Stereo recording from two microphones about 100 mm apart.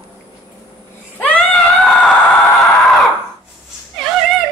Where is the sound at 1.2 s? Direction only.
10° left (ahead or behind).